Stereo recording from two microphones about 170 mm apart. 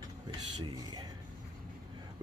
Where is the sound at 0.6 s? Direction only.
25° right (ahead or behind).